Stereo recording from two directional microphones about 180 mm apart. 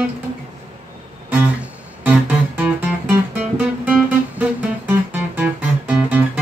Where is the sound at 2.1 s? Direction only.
10° right (ahead or behind).